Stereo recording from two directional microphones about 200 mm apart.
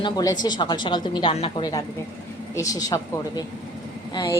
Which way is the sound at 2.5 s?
15° left (ahead or behind).